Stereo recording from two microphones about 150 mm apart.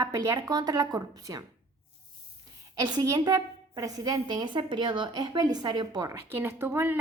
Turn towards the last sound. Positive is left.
turn(degrees=-15)  # may be behind; listen again after turning